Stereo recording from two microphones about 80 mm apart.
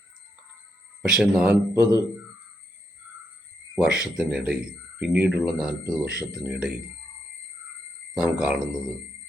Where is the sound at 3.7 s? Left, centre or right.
Centre.